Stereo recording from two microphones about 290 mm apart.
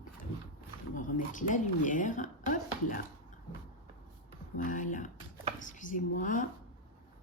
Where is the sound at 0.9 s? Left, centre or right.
Left.